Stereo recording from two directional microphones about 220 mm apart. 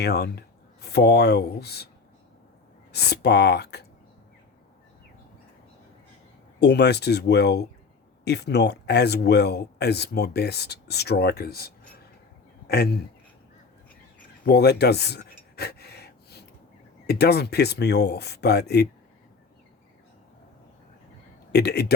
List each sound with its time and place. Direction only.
0.0 s speech: 45° left (ahead or behind)
2.9 s speech: 50° left (ahead or behind)
6.6 s speech: 50° left (ahead or behind)
14.4 s a sound: 50° left (ahead or behind)
17.1 s speech: 45° left (ahead or behind)
21.5 s speech: 50° left (ahead or behind)